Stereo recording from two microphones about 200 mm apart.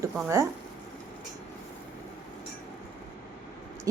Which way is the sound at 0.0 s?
15° right (ahead or behind).